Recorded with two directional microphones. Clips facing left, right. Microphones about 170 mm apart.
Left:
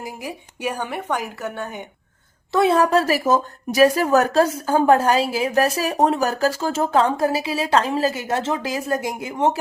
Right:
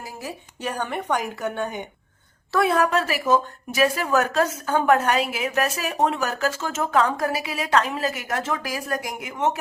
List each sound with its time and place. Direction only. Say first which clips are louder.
0.0 s a woman's voice: left 3 dB; 15° left (ahead or behind)
2.5 s a woman's voice: left 4 dB; 25° left (ahead or behind)